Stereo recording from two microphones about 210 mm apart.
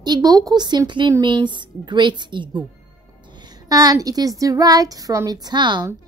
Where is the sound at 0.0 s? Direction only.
20° right (ahead or behind).